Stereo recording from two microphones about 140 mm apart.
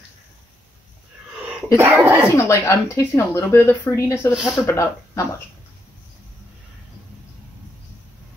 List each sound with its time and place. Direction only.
1.8 s speech: 20° right (ahead or behind)
2.3 s speech: 20° left (ahead or behind)
4.3 s speech: 10° right (ahead or behind)
4.6 s speech: 20° left (ahead or behind)